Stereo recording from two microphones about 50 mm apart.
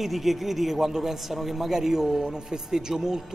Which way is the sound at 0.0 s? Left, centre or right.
Centre.